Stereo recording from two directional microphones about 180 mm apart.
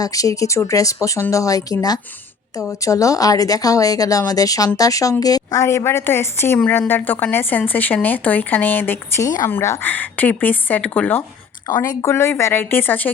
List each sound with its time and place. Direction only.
0.0 s speech: 20° left (ahead or behind)
11.7 s speech: 20° left (ahead or behind)